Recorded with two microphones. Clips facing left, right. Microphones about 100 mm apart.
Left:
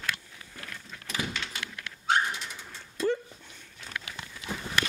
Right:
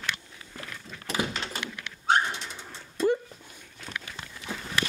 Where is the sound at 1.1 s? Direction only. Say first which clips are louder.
Right 4 dB; 35° right (ahead or behind).